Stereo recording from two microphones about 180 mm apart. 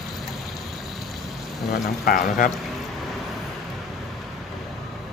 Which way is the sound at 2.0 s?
50° left (ahead or behind).